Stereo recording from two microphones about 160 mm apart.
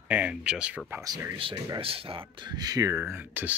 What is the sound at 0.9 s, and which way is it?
Speech, 20° right (ahead or behind).